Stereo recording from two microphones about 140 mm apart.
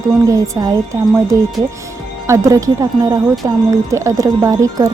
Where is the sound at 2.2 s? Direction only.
20° right (ahead or behind).